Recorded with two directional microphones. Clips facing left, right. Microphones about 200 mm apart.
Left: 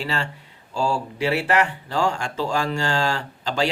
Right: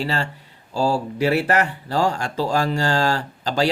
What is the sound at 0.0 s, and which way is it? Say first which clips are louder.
Speech: right 3 dB; 40° right (ahead or behind).